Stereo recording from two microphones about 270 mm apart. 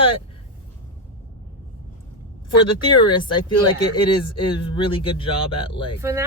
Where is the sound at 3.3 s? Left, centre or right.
Centre.